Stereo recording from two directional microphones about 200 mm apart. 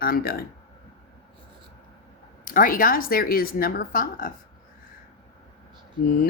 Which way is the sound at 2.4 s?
45° left (ahead or behind).